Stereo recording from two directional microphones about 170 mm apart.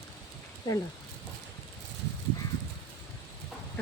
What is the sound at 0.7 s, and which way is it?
Speech, 25° left (ahead or behind).